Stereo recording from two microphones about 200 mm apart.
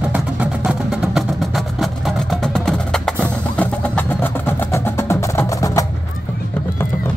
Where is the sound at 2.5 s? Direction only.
5° left (ahead or behind).